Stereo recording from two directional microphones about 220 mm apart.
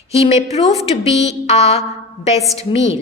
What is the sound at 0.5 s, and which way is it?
Speech, 30° left (ahead or behind).